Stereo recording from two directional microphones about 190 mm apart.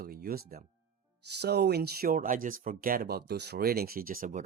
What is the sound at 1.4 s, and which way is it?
Speech, 60° right (ahead or behind).